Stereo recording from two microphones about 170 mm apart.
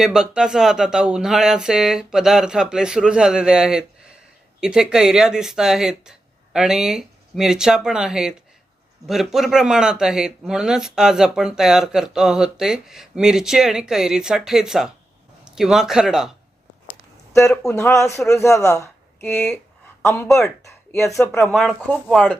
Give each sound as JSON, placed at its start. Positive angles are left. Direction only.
{"t": 0.0, "sound": "speech", "side_deg": -5}
{"t": 17.3, "sound": "speech", "side_deg": 15}
{"t": 20.1, "sound": "speech", "side_deg": 0}
{"t": 20.7, "sound": "a sound", "side_deg": 15}
{"t": 21.2, "sound": "speech", "side_deg": 0}